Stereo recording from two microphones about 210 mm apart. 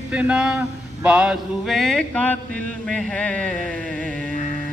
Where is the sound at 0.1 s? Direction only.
5° right (ahead or behind).